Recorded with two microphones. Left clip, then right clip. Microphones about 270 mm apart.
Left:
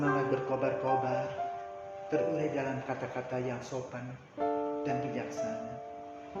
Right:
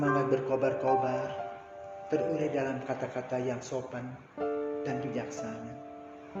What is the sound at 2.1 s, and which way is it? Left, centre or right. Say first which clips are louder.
Speech: right 1 dB; centre.